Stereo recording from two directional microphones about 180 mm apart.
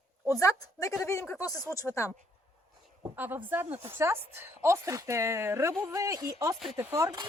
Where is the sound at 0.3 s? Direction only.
20° left (ahead or behind).